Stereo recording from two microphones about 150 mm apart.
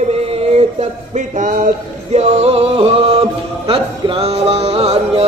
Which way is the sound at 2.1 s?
45° right (ahead or behind).